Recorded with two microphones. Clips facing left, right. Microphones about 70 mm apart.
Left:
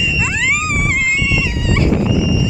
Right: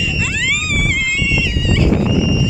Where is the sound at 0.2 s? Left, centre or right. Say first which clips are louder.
Left 3 dB; centre.